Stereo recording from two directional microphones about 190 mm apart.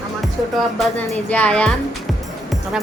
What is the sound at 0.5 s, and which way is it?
A woman's voice, 5° left (ahead or behind).